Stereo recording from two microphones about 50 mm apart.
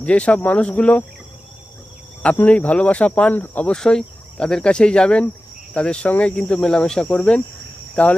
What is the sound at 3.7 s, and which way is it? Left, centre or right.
Cricket, centre.